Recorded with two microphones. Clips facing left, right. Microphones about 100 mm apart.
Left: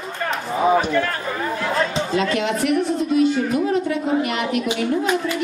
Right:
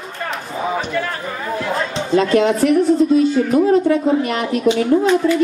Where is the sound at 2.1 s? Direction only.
35° right (ahead or behind).